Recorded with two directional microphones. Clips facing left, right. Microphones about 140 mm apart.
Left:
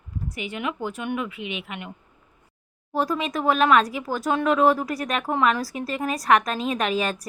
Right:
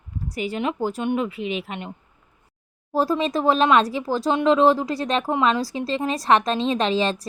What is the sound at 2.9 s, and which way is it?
A woman's voice, 30° right (ahead or behind).